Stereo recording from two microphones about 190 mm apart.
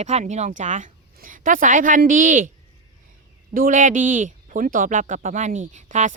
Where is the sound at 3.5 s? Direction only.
45° right (ahead or behind).